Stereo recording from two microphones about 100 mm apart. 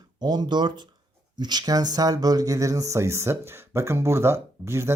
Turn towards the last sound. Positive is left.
turn(degrees=-25)  # may be behind; listen again after turning